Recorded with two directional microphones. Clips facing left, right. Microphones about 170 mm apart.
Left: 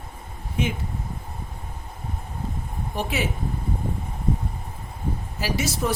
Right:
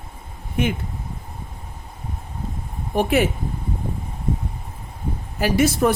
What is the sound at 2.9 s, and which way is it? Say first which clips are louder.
Speech: right 9 dB; 55° right (ahead or behind).